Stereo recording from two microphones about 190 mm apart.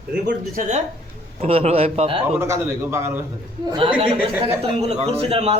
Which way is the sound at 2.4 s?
15° right (ahead or behind).